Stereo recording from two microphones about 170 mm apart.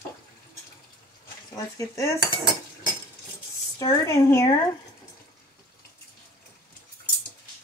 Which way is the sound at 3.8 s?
20° left (ahead or behind).